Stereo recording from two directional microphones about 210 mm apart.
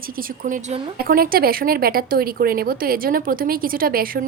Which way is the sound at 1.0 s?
45° right (ahead or behind).